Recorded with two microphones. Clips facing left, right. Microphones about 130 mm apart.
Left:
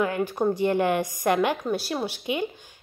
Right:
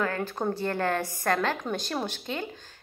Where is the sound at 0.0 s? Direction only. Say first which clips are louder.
Left 5 dB; 15° left (ahead or behind).